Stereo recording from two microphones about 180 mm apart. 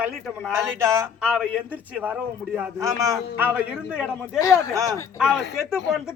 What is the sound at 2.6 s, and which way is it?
Speech, 15° right (ahead or behind).